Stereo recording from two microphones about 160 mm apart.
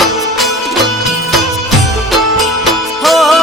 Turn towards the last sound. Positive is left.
turn(degrees=0)  # may be behind; listen again after turning